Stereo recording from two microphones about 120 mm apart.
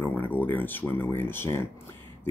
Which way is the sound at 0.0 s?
15° left (ahead or behind).